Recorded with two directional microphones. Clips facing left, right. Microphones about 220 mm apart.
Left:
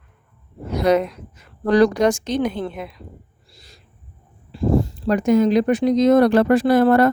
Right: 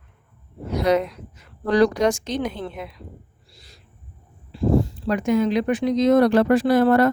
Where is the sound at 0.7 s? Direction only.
50° left (ahead or behind).